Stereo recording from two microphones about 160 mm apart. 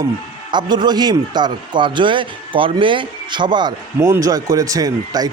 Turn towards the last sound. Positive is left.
turn(degrees=-25)  # may be behind; listen again after turning